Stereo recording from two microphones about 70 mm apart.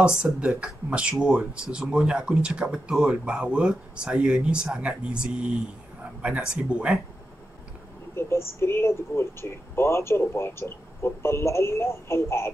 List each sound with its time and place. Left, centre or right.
0.0 s speech: centre
8.2 s speech: left